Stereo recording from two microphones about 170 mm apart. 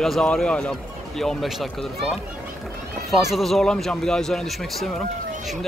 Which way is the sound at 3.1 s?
Centre (ahead or behind).